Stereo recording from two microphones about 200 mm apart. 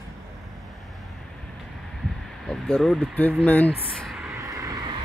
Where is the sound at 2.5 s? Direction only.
Centre (ahead or behind).